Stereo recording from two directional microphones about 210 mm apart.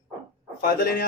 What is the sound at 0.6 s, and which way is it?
Speech, 45° left (ahead or behind).